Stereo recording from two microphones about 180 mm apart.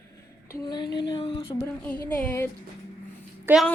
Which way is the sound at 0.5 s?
25° left (ahead or behind).